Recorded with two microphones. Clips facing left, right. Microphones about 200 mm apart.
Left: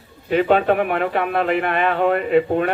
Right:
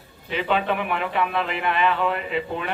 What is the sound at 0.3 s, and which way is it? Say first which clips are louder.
A man's voice: left 8 dB; 45° left (ahead or behind).